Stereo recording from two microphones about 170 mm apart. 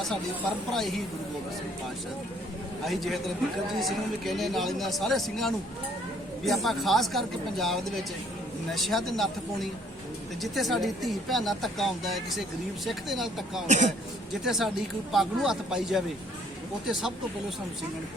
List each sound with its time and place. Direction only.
0.7 s speech: centre (ahead or behind)
2.8 s speech: centre (ahead or behind)
13.7 s speech: 45° right (ahead or behind)
14.4 s speech: centre (ahead or behind)